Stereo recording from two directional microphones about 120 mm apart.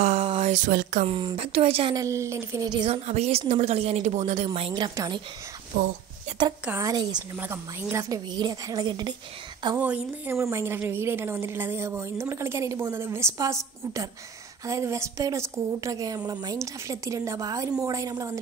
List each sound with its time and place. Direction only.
0.0 s a sound: 65° right (ahead or behind)
0.4 s speech: 85° right
1.1 s speech: 50° right (ahead or behind)
1.9 s a woman's voice: 25° right (ahead or behind)
2.9 s speech: 60° right (ahead or behind)
4.6 s a woman's voice: 45° right (ahead or behind)
4.9 s a woman's voice: 35° right (ahead or behind)
5.7 s speech: 90° right
6.7 s a woman's voice: 30° right (ahead or behind)
7.3 s a woman's voice: 20° right (ahead or behind); by 9.1 s 35° right (ahead or behind)
9.8 s speech: 10° right (ahead or behind)
10.3 s a woman's voice: 25° right (ahead or behind)
14.7 s a woman's voice: 25° right (ahead or behind)